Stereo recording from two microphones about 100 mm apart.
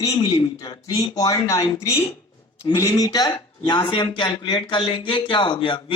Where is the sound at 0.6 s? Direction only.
40° left (ahead or behind).